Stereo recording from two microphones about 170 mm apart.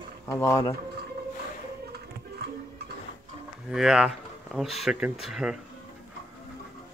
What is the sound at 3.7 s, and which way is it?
Speech, 5° right (ahead or behind).